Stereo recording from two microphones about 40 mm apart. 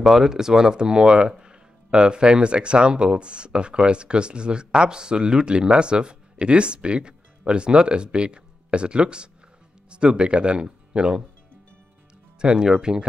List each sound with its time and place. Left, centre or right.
0.0 s speech: centre
12.4 s speech: right